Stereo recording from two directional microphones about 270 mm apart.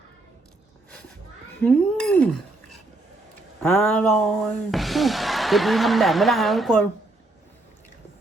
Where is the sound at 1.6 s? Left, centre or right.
Centre.